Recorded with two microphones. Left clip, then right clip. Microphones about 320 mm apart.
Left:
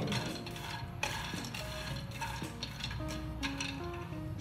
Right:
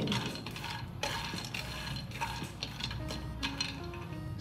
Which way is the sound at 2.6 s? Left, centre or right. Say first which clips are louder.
Right 3 dB; centre.